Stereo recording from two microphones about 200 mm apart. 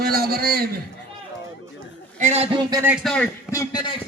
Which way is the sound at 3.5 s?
15° left (ahead or behind).